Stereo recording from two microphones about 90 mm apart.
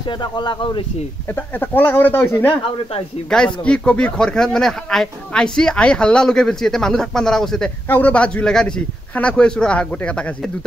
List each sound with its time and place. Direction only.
0.2 s speech: 55° left (ahead or behind)
1.3 s speech: 20° left (ahead or behind)
3.3 s speech: 10° left (ahead or behind)
7.9 s speech: 15° left (ahead or behind)